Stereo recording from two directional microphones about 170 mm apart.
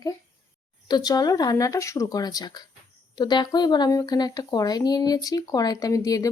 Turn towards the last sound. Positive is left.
turn(degrees=20)  # may be behind; listen again after turning